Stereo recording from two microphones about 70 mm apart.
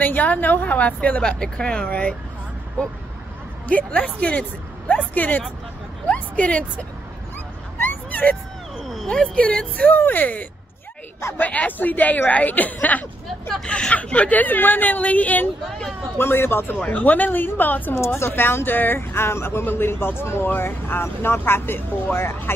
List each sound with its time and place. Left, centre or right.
0.0 s a woman's voice: left
3.6 s a woman's voice: centre
7.8 s a sound: left
8.8 s a sound: centre
9.1 s speech: centre
9.8 s a woman's voice: left
16.2 s a woman's voice: left
18.0 s speech: left